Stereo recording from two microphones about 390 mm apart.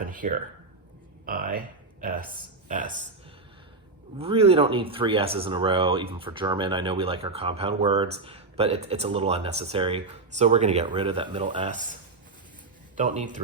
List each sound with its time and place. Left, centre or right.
0.1 s speech: centre
4.2 s speech: centre
13.0 s speech: centre